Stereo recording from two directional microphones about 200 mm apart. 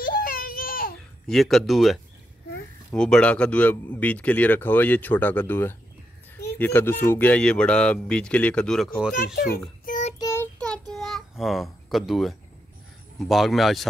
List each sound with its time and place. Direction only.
0.0 s a sound: 45° left (ahead or behind)
1.2 s speech: centre (ahead or behind)
9.8 s child singing: 40° left (ahead or behind)
10.1 s child singing: 15° left (ahead or behind)
13.2 s speech: centre (ahead or behind)